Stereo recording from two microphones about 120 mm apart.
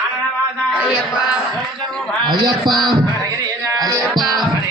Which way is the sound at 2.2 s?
40° right (ahead or behind).